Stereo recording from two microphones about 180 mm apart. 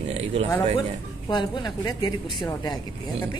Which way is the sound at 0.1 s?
35° right (ahead or behind).